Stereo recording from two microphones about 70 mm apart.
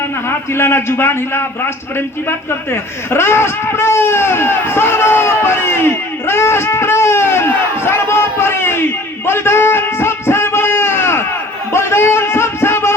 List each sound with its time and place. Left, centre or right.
0.3 s a man's voice: left
3.1 s speech: left
11.7 s a sound: left